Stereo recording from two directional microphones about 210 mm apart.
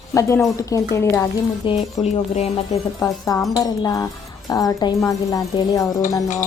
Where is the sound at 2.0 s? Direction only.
30° left (ahead or behind).